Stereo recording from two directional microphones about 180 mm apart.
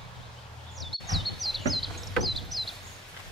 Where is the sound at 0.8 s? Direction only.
Centre (ahead or behind).